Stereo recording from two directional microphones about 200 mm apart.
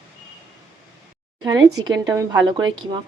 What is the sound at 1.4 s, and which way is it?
Speech, 20° right (ahead or behind).